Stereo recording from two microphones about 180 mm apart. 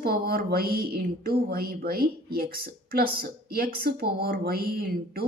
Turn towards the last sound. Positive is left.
turn(degrees=-60)  # may be behind; listen again after turning